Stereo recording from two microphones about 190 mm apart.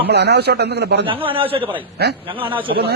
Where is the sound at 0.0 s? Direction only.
60° right (ahead or behind).